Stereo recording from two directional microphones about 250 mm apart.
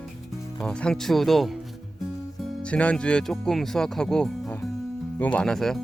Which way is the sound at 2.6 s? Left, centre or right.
Centre.